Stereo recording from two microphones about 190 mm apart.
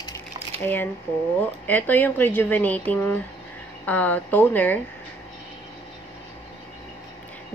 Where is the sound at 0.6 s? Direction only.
10° left (ahead or behind).